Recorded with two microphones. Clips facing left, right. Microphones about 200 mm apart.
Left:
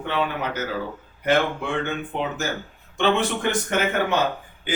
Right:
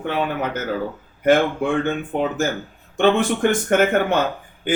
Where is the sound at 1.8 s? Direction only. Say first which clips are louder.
Right 5 dB; 50° right (ahead or behind).